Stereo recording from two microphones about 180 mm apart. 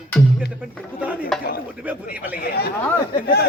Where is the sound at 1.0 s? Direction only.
10° right (ahead or behind).